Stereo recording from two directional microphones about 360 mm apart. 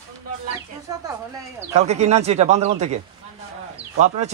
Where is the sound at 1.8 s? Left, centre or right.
Centre.